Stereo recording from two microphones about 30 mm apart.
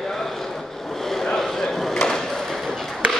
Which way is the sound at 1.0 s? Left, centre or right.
Centre.